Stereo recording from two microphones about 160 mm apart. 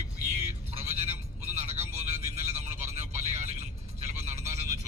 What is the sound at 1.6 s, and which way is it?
Vehicle, 45° right (ahead or behind).